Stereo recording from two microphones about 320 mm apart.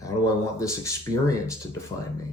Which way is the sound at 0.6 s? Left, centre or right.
Centre.